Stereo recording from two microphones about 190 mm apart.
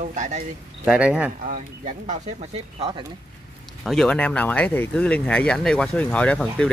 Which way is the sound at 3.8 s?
Centre (ahead or behind).